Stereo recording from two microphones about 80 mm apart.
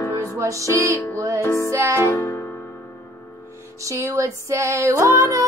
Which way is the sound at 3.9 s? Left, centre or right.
Right.